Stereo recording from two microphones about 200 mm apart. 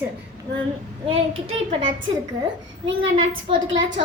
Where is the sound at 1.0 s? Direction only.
30° right (ahead or behind).